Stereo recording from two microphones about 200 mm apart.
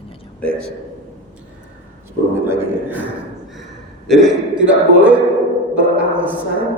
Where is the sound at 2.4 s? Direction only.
10° right (ahead or behind).